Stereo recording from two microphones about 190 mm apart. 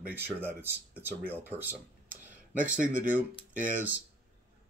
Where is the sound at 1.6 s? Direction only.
10° right (ahead or behind).